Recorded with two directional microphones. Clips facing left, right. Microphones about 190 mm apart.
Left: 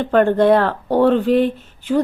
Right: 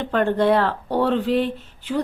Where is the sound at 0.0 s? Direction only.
50° left (ahead or behind).